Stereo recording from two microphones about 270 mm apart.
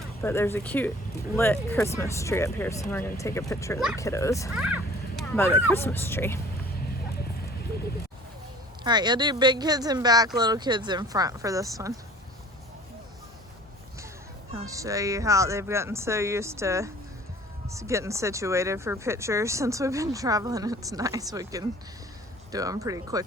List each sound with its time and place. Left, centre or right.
0.2 s speech: centre
4.5 s speech: centre
8.8 s speech: centre
14.5 s speech: centre